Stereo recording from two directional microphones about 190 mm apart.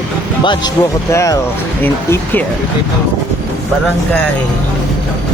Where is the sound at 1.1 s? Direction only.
15° left (ahead or behind).